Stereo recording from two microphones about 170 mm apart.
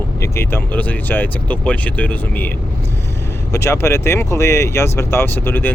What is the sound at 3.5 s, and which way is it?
Speech, 15° left (ahead or behind).